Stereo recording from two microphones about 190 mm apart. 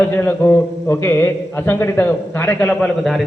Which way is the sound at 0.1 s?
10° left (ahead or behind).